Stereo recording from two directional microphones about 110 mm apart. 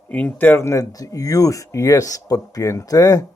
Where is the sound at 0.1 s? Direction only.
15° left (ahead or behind); by 3.2 s 35° left (ahead or behind).